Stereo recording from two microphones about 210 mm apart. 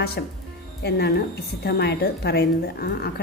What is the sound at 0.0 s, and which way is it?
A woman's voice, 50° left (ahead or behind).